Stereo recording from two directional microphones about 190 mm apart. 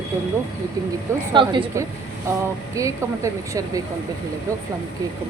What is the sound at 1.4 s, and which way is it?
A woman's voice, 20° right (ahead or behind).